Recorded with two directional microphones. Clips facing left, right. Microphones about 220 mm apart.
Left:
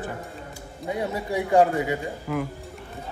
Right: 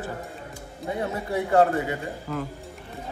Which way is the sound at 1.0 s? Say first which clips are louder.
Left 1 dB; 15° left (ahead or behind).